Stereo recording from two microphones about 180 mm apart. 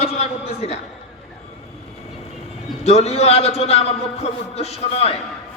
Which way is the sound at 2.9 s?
35° left (ahead or behind).